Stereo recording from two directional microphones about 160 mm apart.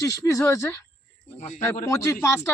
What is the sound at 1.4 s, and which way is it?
Speech, 50° left (ahead or behind).